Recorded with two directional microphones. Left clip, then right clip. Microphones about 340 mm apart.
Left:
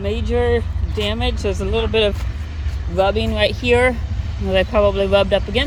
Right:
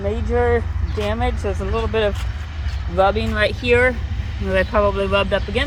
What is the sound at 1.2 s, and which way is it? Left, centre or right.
Speech, centre.